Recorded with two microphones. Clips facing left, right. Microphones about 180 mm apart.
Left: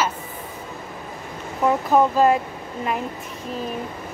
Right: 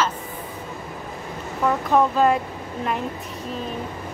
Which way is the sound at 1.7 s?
5° left (ahead or behind).